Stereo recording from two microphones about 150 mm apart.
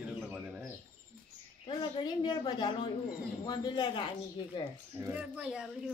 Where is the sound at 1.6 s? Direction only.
30° left (ahead or behind).